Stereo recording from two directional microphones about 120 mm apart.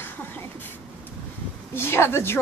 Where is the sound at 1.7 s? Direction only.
20° left (ahead or behind).